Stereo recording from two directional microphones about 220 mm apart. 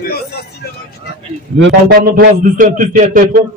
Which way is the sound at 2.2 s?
40° right (ahead or behind).